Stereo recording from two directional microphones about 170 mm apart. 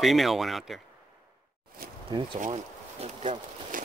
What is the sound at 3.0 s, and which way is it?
Speech, 45° right (ahead or behind).